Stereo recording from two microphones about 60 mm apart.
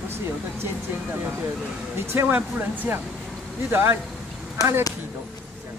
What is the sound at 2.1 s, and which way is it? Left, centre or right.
Speech, right.